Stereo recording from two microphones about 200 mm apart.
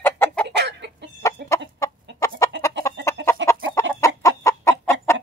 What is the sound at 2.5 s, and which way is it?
Chicken, 60° right (ahead or behind).